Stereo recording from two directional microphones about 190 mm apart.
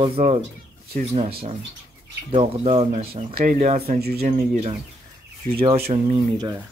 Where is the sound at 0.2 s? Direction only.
40° right (ahead or behind).